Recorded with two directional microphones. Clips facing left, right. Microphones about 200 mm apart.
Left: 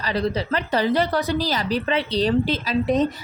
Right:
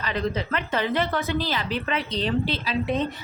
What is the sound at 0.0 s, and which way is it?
A woman's voice, 35° left (ahead or behind).